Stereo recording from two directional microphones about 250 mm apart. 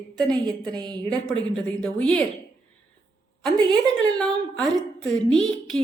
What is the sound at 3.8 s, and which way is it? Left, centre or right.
A woman's voice, centre.